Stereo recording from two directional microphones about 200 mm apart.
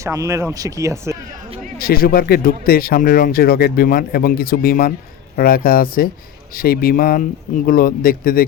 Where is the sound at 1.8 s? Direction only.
50° left (ahead or behind).